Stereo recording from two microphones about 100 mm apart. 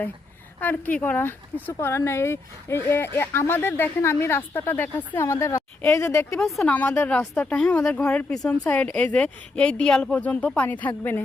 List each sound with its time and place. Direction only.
0.6 s speech: 15° left (ahead or behind)
6.7 s speech: 15° left (ahead or behind)